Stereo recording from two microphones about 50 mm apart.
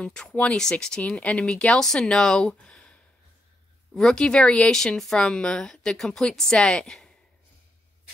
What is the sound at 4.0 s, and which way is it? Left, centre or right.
Speech, centre.